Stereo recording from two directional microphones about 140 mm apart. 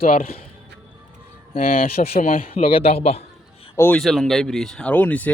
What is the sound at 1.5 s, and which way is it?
Speech, 90° left.